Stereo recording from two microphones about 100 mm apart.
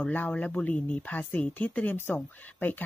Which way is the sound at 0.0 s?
15° left (ahead or behind).